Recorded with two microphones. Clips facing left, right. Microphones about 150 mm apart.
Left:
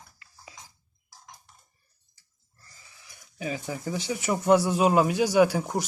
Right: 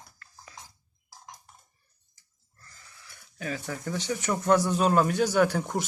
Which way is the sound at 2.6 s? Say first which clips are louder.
Right 2 dB; 15° left (ahead or behind).